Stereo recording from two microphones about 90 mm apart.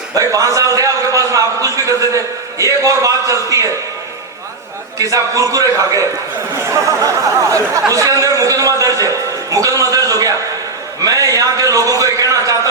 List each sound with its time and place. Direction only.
0.2 s a man's voice: 40° right (ahead or behind)
4.9 s a man's voice: 35° right (ahead or behind)
6.7 s a sound: 35° right (ahead or behind)
7.5 s a man's voice: 40° right (ahead or behind)